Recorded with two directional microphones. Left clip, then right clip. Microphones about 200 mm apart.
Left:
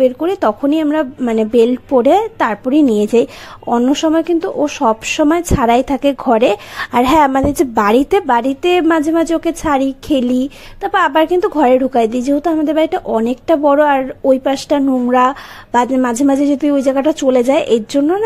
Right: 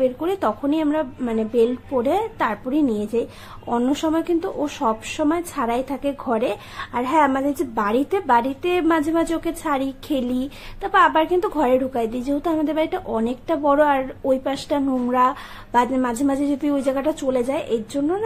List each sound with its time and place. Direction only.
0.0 s speech: 30° left (ahead or behind)
3.6 s speech: 30° left (ahead or behind)